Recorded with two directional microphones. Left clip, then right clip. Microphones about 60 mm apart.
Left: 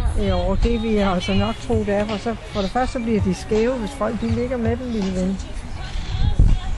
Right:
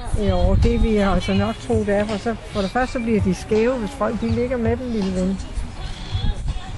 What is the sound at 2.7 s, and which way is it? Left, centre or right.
Speech, right.